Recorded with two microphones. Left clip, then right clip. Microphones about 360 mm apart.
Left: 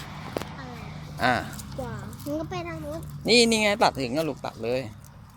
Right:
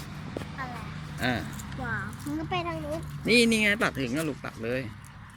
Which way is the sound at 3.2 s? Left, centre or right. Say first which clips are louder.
Left 3 dB; centre.